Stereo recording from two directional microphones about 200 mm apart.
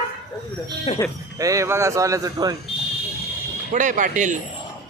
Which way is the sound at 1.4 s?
15° right (ahead or behind).